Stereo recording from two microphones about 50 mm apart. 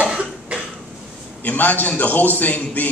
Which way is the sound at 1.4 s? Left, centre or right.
Left.